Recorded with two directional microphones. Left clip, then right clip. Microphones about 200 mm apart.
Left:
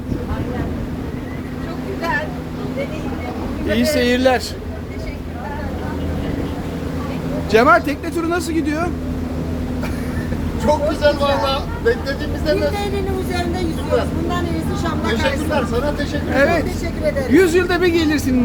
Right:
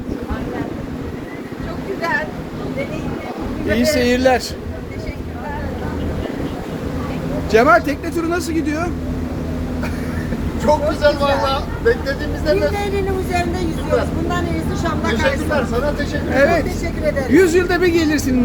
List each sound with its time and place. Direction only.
3.7 s speech: centre (ahead or behind)
7.5 s speech: 5° left (ahead or behind)
10.7 s speech: 10° left (ahead or behind)
15.1 s speech: 15° left (ahead or behind)
16.3 s speech: centre (ahead or behind)